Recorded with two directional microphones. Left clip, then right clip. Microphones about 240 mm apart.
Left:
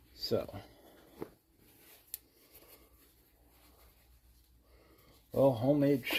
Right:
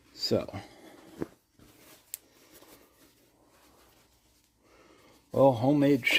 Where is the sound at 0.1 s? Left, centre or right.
Right.